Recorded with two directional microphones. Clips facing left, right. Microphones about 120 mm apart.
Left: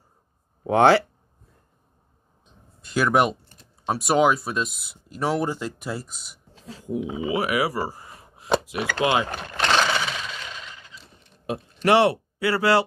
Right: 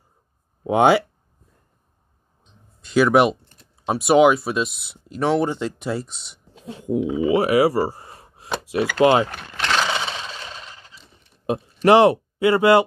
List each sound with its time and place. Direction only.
0.7 s speech: 15° right (ahead or behind)
2.9 s speech: 5° right (ahead or behind)
4.6 s speech: 45° left (ahead or behind)
5.1 s speech: 5° left (ahead or behind)
6.6 s speech: 25° right (ahead or behind)
9.3 s a sound: 30° left (ahead or behind)
9.8 s gobble: 25° right (ahead or behind)
11.4 s speech: 25° right (ahead or behind)